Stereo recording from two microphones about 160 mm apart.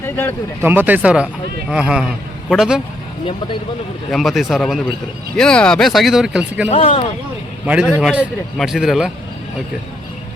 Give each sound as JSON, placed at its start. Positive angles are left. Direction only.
{"t": 0.0, "sound": "speech", "side_deg": 15}
{"t": 0.6, "sound": "speech", "side_deg": -15}
{"t": 3.2, "sound": "speech", "side_deg": 30}
{"t": 4.1, "sound": "speech", "side_deg": 0}
{"t": 6.7, "sound": "speech", "side_deg": 40}
{"t": 7.6, "sound": "a man's voice", "side_deg": -10}
{"t": 7.9, "sound": "speech", "side_deg": 5}